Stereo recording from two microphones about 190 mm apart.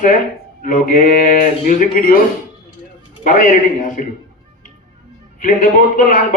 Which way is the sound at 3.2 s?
40° left (ahead or behind).